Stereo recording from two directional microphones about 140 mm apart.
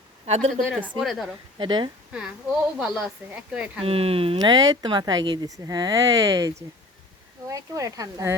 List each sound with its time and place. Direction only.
0.3 s speech: 50° right (ahead or behind)
0.7 s a woman's voice: centre (ahead or behind)
1.5 s speech: 35° right (ahead or behind)
2.7 s speech: 5° right (ahead or behind)
3.8 s speech: 45° right (ahead or behind)
4.4 s speech: 30° right (ahead or behind)